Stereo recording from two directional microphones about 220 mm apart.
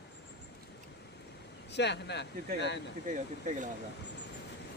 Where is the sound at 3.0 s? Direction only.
35° right (ahead or behind).